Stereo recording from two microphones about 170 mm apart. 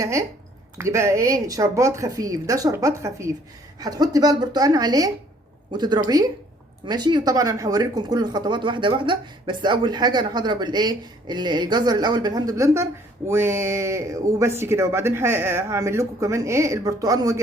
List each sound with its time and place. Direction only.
0.0 s speech: 20° right (ahead or behind)